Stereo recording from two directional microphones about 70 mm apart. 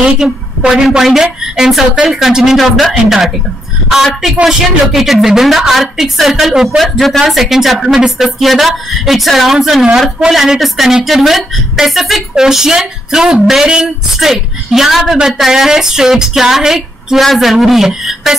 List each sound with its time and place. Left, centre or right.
0.2 s a woman's voice: centre